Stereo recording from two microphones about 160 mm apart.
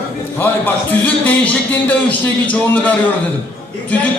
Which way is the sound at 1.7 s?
10° left (ahead or behind).